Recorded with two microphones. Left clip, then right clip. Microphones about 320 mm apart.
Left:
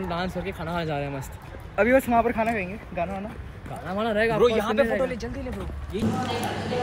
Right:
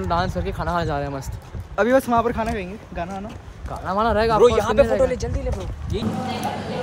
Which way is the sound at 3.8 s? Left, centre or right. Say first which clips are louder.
Right 5 dB; centre.